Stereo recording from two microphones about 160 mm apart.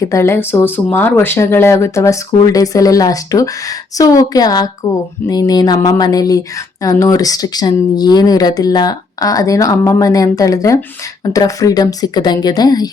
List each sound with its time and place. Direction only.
0.1 s speech: 15° left (ahead or behind)